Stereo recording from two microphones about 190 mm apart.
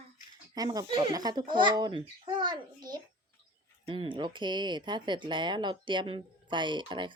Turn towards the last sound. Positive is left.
turn(degrees=-25)  # may be behind; listen again after turning